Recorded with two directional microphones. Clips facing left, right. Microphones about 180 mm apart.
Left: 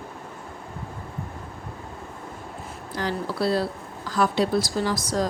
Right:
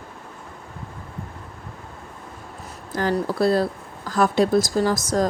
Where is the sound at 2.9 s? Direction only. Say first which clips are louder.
Right 6 dB; 50° right (ahead or behind).